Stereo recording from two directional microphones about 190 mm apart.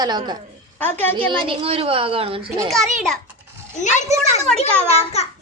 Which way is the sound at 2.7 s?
Centre (ahead or behind).